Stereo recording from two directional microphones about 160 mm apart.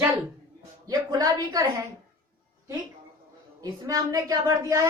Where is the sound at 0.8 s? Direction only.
25° right (ahead or behind).